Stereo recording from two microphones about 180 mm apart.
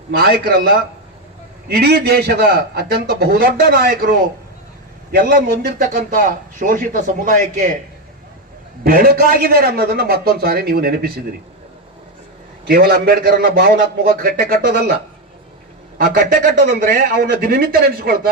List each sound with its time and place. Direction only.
0.1 s a man's voice: 55° right (ahead or behind)
8.8 s a man's voice: 55° right (ahead or behind)
12.6 s a man's voice: 60° right (ahead or behind)
16.0 s a man's voice: 55° right (ahead or behind)